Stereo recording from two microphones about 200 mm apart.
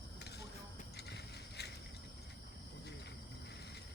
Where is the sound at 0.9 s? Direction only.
55° left (ahead or behind).